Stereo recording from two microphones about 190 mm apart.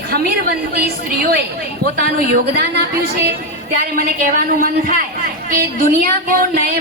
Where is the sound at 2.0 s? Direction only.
55° right (ahead or behind).